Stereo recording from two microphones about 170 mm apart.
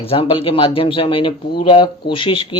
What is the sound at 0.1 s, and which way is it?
Speech, 30° left (ahead or behind).